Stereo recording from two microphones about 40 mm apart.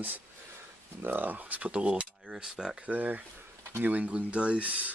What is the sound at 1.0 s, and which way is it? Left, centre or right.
Speech, right.